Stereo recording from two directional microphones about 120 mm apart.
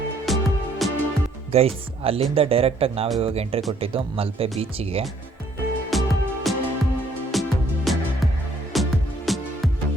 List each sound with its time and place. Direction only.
0.3 s music: centre (ahead or behind)
1.5 s speech: 55° right (ahead or behind)
5.9 s music: centre (ahead or behind)